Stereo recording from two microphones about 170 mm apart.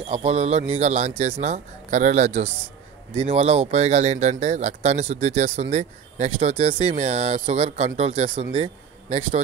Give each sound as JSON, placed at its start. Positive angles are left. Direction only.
{"t": 0.0, "sound": "speech", "side_deg": -35}